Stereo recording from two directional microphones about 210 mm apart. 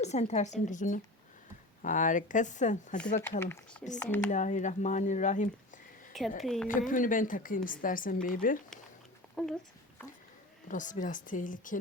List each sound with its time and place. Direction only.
0.0 s a woman's voice: 30° left (ahead or behind)
3.4 s speech: 10° left (ahead or behind)
4.3 s a woman's voice: 35° left (ahead or behind)
6.4 s a woman's voice: centre (ahead or behind)
6.7 s a woman's voice: 40° left (ahead or behind)
9.4 s a woman's voice: 5° left (ahead or behind)
10.7 s a woman's voice: 40° left (ahead or behind)